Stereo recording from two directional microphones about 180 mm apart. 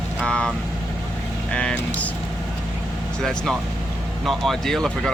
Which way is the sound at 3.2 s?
Centre (ahead or behind).